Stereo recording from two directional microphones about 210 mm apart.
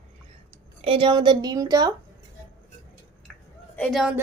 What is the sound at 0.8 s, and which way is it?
Speech, 25° right (ahead or behind).